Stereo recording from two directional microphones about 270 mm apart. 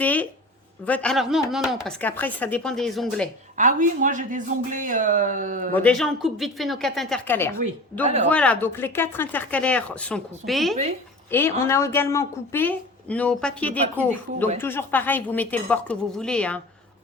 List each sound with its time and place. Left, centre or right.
0.0 s speech: centre
3.6 s speech: right
5.7 s speech: centre
8.0 s speech: right
8.3 s a woman's voice: centre